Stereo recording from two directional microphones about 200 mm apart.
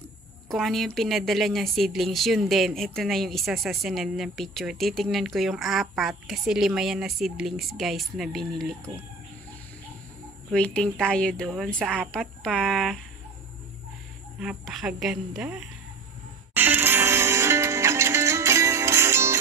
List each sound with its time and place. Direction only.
0.5 s speech: centre (ahead or behind)
10.5 s speech: 5° left (ahead or behind)
14.4 s speech: centre (ahead or behind)
16.5 s music: 10° right (ahead or behind)